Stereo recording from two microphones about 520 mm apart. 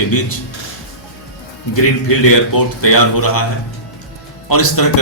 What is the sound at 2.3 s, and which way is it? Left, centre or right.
A man's voice, left.